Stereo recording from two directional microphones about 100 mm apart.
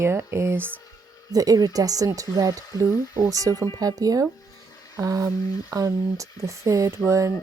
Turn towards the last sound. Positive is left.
turn(degrees=-30)  # may be behind; listen again after turning